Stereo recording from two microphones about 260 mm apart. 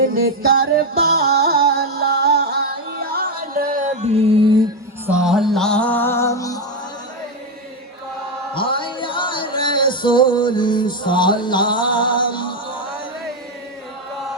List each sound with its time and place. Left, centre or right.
0.1 s music: right
5.0 s music: centre
8.5 s music: centre